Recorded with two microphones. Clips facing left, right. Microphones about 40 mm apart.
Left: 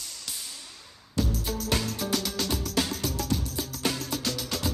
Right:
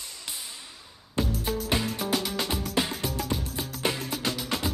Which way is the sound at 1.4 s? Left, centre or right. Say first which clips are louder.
Right 2 dB; centre.